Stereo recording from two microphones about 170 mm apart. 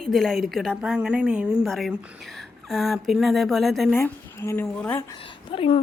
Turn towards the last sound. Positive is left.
turn(degrees=35)  # may be behind; listen again after turning